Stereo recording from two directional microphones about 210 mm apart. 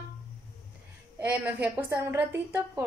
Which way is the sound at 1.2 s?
10° right (ahead or behind).